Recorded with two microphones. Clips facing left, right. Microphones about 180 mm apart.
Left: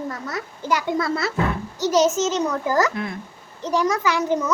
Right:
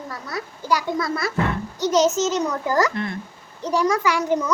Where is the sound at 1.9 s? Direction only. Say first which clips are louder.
Even; 10° left (ahead or behind).